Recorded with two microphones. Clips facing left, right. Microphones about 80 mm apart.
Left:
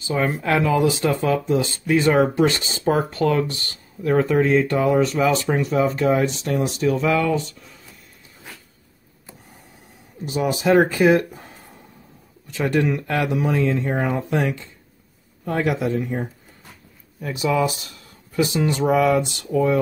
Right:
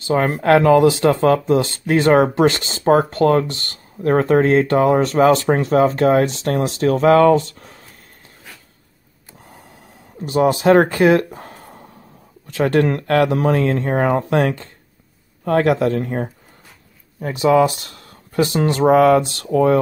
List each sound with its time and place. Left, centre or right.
0.0 s speech: right
10.2 s speech: right
18.8 s speech: right